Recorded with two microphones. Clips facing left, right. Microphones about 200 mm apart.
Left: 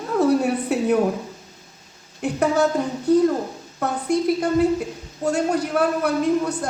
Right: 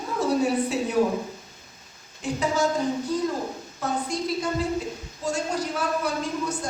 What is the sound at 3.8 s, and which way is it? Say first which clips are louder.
A woman's voice: left 6 dB; 60° left (ahead or behind).